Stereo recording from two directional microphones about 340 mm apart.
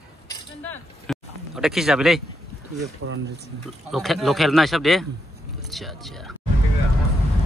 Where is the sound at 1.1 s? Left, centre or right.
Centre.